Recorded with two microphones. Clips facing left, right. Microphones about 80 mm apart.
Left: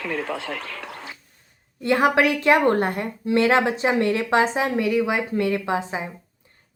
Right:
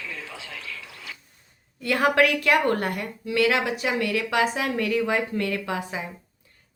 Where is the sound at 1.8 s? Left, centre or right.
Left.